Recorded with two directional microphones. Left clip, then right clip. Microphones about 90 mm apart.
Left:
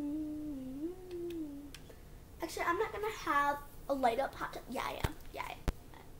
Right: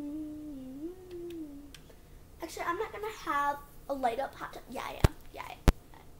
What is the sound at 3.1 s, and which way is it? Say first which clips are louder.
Speech: right 2 dB; 20° left (ahead or behind).